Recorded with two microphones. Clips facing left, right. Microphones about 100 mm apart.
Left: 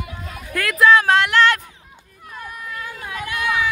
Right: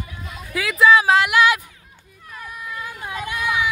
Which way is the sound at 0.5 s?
Centre (ahead or behind).